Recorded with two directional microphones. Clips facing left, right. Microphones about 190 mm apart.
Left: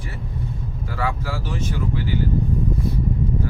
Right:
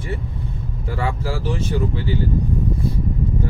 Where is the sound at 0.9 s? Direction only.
25° right (ahead or behind).